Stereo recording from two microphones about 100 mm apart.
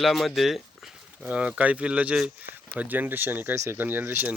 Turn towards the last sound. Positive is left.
turn(degrees=-20)  # may be behind; listen again after turning